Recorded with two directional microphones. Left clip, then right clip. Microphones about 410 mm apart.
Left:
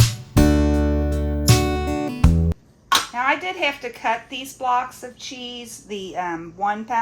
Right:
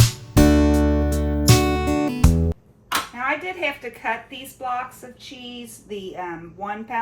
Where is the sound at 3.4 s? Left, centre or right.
Centre.